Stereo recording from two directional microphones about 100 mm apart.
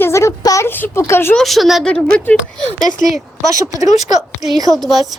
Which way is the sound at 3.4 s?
35° right (ahead or behind).